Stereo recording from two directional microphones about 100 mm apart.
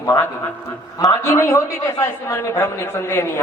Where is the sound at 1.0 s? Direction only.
35° left (ahead or behind).